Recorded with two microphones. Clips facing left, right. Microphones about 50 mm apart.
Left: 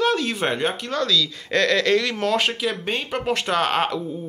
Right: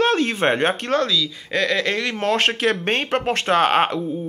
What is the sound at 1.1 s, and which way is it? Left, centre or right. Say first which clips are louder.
Speech: left 1 dB; centre.